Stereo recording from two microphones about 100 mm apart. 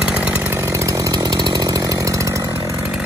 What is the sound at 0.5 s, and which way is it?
Chainsaw, 30° right (ahead or behind).